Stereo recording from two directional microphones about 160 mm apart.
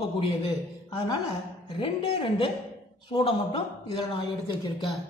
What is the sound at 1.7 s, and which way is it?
A woman's voice, 35° left (ahead or behind).